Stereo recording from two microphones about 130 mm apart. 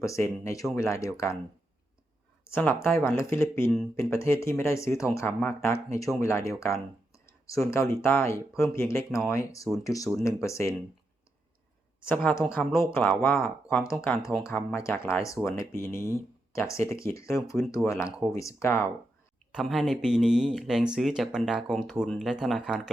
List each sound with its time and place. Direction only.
0.0 s speech: 25° left (ahead or behind)
2.5 s speech: 15° left (ahead or behind)
7.3 s a sound: 25° left (ahead or behind)
7.7 s speech: 20° left (ahead or behind)
12.0 s speech: 10° left (ahead or behind)
12.3 s speech: 20° left (ahead or behind)
19.5 s speech: centre (ahead or behind)